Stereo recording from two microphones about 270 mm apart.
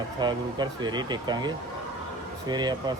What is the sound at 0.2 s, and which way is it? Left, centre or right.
Speech, centre.